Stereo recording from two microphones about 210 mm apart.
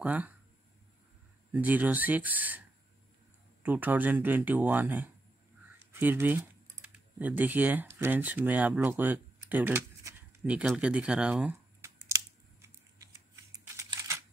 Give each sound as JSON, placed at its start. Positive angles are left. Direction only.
{"t": 0.0, "sound": "speech", "side_deg": -10}
{"t": 1.5, "sound": "speech", "side_deg": -10}
{"t": 3.6, "sound": "speech", "side_deg": -10}
{"t": 12.1, "sound": "a sound", "side_deg": -15}
{"t": 12.6, "sound": "typing", "side_deg": -15}